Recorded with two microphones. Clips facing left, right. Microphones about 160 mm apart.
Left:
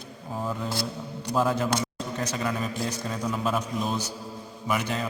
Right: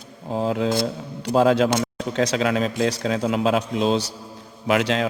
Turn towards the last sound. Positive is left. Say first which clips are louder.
# right 8 dB
turn(degrees=-90)